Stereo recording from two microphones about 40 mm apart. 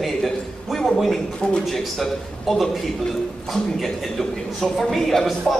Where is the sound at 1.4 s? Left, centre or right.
Left.